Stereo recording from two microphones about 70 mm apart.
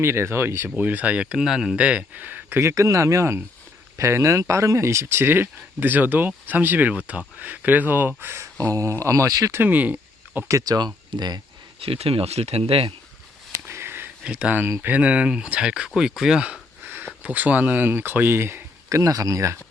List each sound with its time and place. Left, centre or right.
0.0 s speech: right
0.8 s speech: right
2.6 s speech: right
8.5 s speech: right
9.6 s speech: right
10.5 s speech: right
13.7 s a sound: right
14.3 s speech: centre
16.0 s a sound: centre; by 17.1 s right
17.2 s speech: right